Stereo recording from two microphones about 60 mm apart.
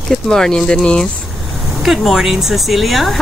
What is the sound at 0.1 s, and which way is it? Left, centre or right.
Speech, centre.